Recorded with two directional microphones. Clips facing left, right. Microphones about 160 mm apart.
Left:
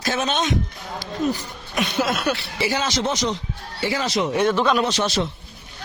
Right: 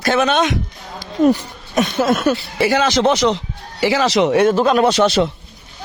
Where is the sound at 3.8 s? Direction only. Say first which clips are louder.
Right 8 dB; 90° right.